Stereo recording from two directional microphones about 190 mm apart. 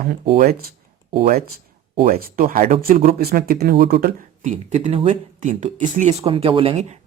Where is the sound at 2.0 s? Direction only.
50° right (ahead or behind).